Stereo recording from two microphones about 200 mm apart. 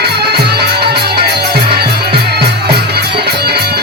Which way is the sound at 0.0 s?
55° right (ahead or behind).